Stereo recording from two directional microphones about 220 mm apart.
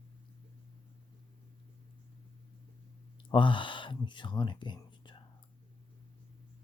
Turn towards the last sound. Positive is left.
turn(degrees=20)  # may be behind; listen again after turning